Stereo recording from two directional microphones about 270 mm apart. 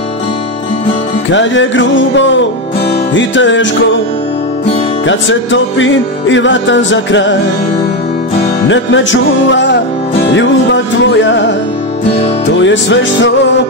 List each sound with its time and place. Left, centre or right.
1.3 s music: left
5.0 s music: left
8.6 s music: left
12.6 s music: left